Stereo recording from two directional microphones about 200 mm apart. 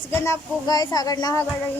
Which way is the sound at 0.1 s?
15° left (ahead or behind).